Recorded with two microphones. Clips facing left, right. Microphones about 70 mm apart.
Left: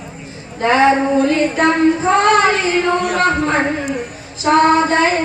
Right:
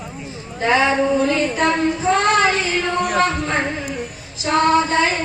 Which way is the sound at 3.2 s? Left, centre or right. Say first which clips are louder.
Left 4 dB; left.